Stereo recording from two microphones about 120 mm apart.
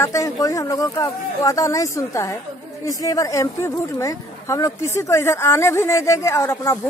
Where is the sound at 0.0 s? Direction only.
25° left (ahead or behind).